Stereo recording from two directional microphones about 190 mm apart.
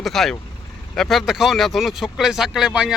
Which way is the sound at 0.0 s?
Centre (ahead or behind).